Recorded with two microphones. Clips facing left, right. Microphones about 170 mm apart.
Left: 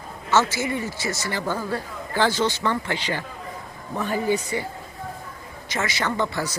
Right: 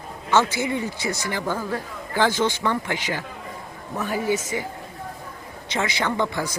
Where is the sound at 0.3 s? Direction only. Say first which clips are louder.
Right 1 dB; 15° right (ahead or behind).